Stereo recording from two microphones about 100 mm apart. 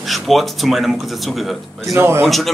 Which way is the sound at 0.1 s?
Centre (ahead or behind).